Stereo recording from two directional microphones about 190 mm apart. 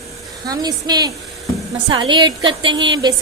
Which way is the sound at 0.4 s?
20° right (ahead or behind).